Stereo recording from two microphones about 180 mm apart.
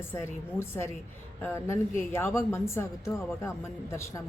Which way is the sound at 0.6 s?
15° left (ahead or behind).